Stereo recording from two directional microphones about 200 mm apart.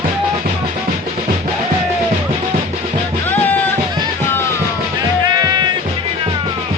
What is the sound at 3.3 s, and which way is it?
Music, 10° left (ahead or behind).